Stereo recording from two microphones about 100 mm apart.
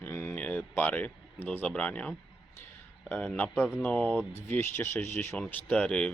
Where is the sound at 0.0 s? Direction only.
25° left (ahead or behind).